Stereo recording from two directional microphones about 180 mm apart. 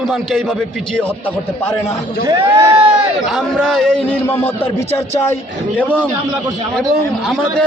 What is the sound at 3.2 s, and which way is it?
A man's voice, centre (ahead or behind).